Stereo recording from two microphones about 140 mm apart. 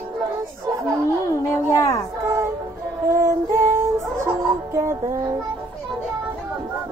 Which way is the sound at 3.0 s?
20° right (ahead or behind).